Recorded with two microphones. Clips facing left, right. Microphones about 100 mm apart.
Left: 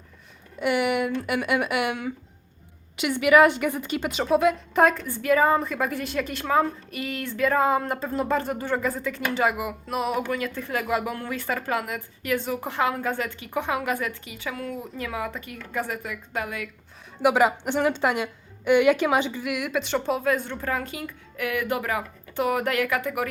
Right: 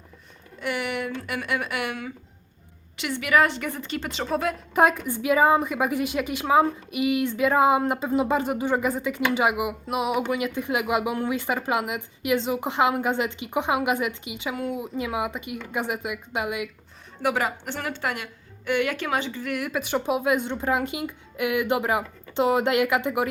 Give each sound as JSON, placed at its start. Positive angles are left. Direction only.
{"t": 0.6, "sound": "a woman's voice", "side_deg": 15}
{"t": 17.2, "sound": "a woman's voice", "side_deg": 15}
{"t": 19.5, "sound": "speech", "side_deg": 0}